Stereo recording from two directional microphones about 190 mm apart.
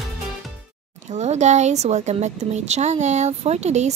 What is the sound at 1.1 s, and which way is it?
A woman's voice, 35° right (ahead or behind).